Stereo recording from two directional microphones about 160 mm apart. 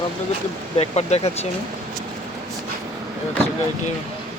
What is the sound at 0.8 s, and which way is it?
Speech, 40° left (ahead or behind).